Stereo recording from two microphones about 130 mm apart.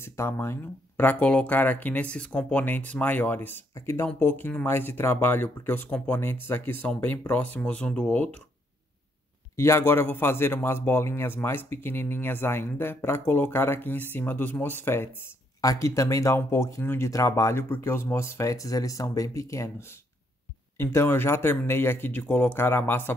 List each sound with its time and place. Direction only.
0.0 s speech: 20° left (ahead or behind)
9.6 s a man's voice: 20° left (ahead or behind)